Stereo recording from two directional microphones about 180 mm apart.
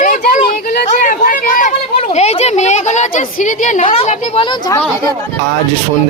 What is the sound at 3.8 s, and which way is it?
Speech, 30° left (ahead or behind).